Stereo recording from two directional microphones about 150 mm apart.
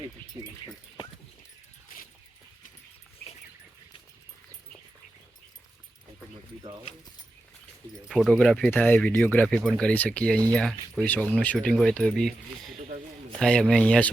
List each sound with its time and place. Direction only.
0.4 s speech: 25° right (ahead or behind)
8.0 s speech: 5° right (ahead or behind)